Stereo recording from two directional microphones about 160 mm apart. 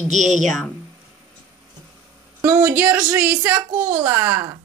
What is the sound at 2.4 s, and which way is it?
A woman's voice, 15° right (ahead or behind).